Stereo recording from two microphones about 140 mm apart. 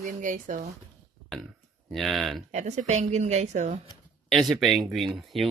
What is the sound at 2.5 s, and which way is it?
A woman's voice, 55° right (ahead or behind).